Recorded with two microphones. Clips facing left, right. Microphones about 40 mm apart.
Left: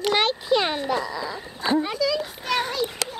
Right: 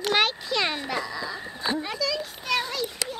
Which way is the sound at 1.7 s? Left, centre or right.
Centre.